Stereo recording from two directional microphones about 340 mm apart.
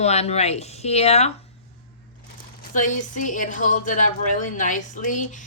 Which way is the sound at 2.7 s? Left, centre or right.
Left.